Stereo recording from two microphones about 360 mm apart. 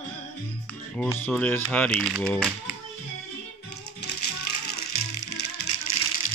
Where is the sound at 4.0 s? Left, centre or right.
Left.